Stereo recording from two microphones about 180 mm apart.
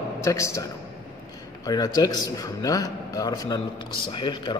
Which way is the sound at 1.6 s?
20° left (ahead or behind).